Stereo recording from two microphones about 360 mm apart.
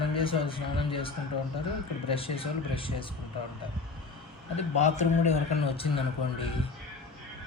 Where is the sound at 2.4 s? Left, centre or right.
Centre.